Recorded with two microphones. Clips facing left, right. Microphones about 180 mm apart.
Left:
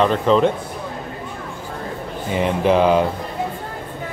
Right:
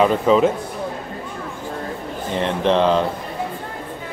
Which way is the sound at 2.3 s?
10° left (ahead or behind).